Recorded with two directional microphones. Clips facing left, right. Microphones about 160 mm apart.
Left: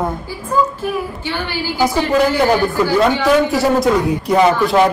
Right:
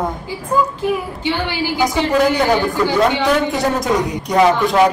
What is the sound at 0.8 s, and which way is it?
A woman's voice, 15° right (ahead or behind).